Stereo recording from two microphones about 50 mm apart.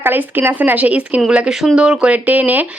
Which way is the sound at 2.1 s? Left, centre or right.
Right.